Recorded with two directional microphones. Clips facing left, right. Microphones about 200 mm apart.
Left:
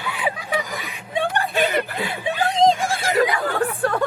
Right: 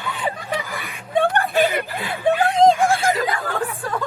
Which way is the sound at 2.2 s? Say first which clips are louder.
Right 3 dB; 55° right (ahead or behind).